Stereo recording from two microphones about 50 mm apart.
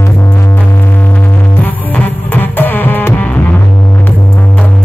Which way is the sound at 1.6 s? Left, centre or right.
Left.